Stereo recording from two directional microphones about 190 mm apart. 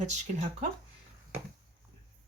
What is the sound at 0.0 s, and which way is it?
Speech, 35° right (ahead or behind).